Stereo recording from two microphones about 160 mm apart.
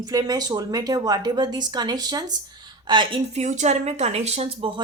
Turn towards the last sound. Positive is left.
turn(degrees=-35)  # may be behind; listen again after turning